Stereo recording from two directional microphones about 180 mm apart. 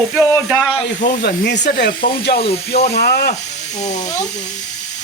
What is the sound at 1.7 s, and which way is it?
Speech, 50° left (ahead or behind).